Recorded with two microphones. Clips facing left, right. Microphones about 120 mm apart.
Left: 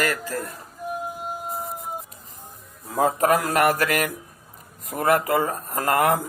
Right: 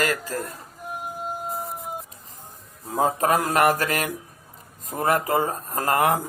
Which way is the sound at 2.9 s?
30° right (ahead or behind).